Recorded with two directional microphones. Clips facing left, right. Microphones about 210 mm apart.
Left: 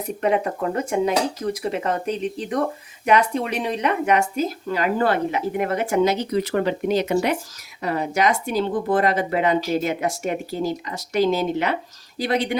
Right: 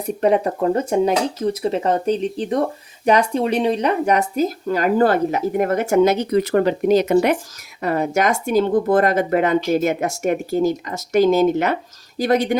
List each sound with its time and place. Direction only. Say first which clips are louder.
0.2 s speech: right 4 dB; 35° right (ahead or behind)